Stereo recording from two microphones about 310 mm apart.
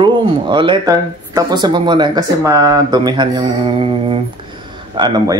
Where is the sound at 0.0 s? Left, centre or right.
Centre.